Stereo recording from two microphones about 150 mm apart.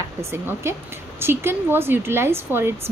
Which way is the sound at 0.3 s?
15° right (ahead or behind).